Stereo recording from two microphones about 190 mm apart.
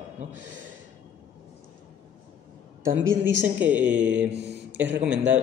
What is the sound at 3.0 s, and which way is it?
Speech, 85° right.